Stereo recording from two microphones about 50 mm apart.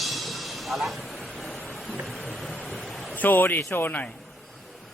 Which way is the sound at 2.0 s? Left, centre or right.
Centre.